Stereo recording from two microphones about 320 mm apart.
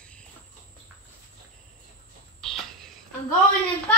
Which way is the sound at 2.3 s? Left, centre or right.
Centre.